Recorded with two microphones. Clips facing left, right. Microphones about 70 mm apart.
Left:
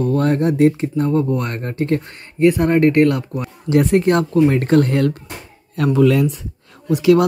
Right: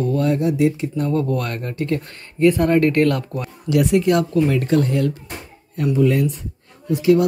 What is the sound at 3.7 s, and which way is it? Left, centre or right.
Speech, left.